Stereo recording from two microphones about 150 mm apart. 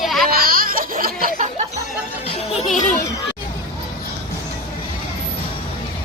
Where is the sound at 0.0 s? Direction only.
Centre (ahead or behind).